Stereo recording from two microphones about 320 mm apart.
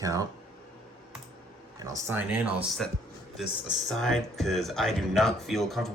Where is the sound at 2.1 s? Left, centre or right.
Centre.